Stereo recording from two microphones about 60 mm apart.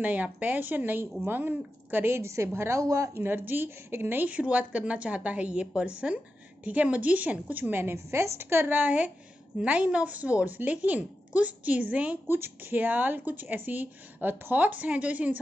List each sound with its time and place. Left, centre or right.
0.0 s speech: right
2.8 s speech: right
3.2 s speech: right
4.3 s speech: right
8.6 s speech: right
12.3 s speech: right